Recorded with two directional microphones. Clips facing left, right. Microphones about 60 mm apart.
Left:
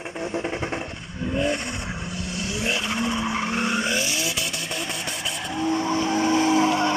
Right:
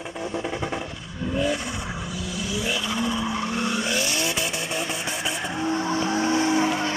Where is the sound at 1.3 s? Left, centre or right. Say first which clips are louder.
Even; left.